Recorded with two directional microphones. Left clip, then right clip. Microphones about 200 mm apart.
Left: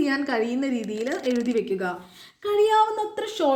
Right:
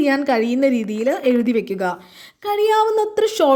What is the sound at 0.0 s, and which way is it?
A woman's voice, 40° right (ahead or behind).